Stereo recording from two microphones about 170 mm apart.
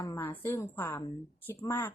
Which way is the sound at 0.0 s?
15° left (ahead or behind).